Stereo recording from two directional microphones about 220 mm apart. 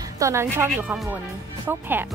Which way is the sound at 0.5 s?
5° right (ahead or behind).